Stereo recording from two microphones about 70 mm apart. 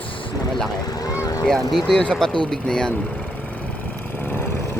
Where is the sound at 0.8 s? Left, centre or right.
Left.